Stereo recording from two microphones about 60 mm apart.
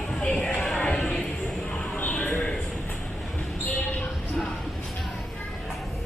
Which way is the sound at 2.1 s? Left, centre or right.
Left.